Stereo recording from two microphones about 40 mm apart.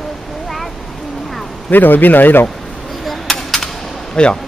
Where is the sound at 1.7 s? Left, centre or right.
Left.